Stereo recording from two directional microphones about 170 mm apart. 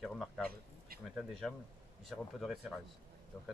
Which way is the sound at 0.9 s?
60° right (ahead or behind).